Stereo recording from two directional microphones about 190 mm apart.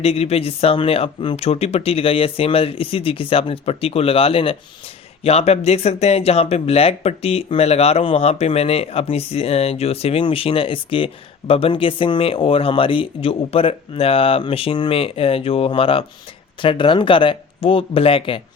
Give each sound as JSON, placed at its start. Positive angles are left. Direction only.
{"t": 0.0, "sound": "speech", "side_deg": 30}